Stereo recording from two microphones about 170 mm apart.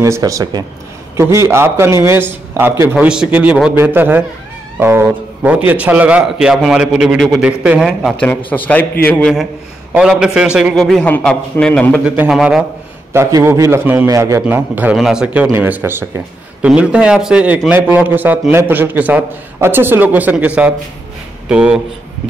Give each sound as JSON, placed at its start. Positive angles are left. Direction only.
{"t": 0.0, "sound": "a man's voice", "side_deg": -20}
{"t": 8.5, "sound": "a man's voice", "side_deg": 10}
{"t": 9.9, "sound": "a man's voice", "side_deg": -5}
{"t": 11.9, "sound": "a man's voice", "side_deg": -5}
{"t": 13.1, "sound": "a man's voice", "side_deg": -15}